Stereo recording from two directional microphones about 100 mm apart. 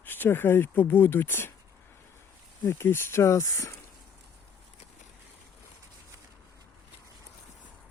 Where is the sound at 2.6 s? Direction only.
25° left (ahead or behind).